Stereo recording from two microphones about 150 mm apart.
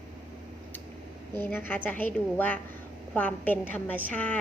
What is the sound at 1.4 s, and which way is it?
A woman's voice, 15° left (ahead or behind).